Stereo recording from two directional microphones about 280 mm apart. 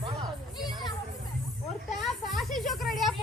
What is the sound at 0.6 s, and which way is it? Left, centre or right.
Children playing, centre.